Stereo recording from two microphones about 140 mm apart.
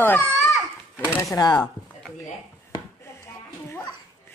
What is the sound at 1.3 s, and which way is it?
Speech, 30° left (ahead or behind).